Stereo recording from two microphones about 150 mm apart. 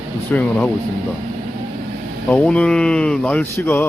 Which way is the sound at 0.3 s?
10° left (ahead or behind).